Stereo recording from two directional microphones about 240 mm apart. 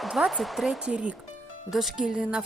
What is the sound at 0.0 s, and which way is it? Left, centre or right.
A woman's voice, centre.